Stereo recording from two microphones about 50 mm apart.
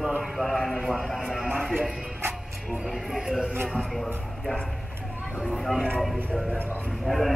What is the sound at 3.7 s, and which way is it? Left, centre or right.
Speech, centre.